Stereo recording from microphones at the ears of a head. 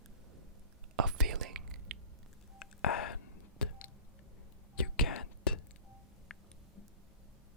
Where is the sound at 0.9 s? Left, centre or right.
Right.